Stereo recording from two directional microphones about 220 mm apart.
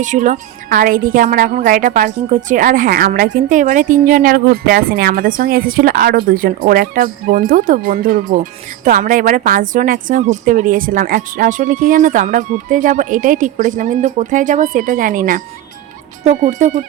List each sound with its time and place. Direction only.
0.0 s speech: 35° right (ahead or behind)